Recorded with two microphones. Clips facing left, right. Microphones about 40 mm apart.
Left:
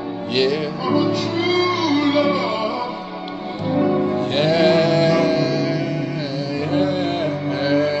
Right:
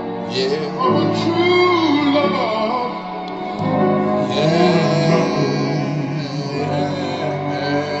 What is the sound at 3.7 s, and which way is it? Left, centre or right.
Music, right.